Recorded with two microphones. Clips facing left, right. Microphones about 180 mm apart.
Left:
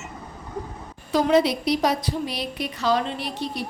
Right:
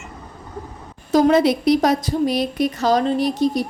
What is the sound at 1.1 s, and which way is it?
A woman's voice, 50° right (ahead or behind).